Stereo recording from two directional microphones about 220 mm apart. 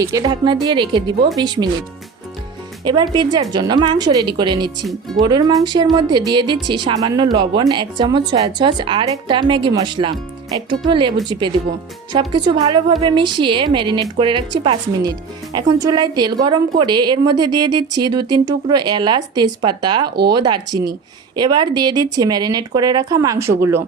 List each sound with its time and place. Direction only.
0.0 s speech: 15° right (ahead or behind)
2.8 s speech: 20° right (ahead or behind)
4.9 s speech: centre (ahead or behind)
5.2 s speech: 20° right (ahead or behind)
20.1 s speech: 45° right (ahead or behind)
20.3 s speech: 20° right (ahead or behind)